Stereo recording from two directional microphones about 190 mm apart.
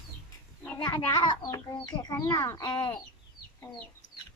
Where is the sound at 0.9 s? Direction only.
20° left (ahead or behind).